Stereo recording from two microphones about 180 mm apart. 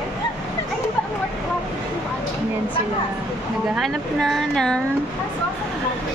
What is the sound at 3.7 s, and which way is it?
Speech, centre (ahead or behind).